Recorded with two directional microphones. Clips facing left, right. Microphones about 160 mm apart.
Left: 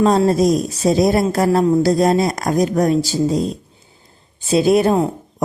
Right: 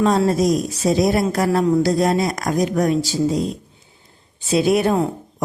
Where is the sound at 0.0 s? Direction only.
35° left (ahead or behind).